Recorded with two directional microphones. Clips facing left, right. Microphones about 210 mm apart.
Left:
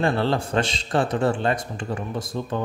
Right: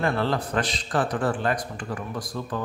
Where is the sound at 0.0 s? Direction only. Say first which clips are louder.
Left 3 dB; 30° left (ahead or behind).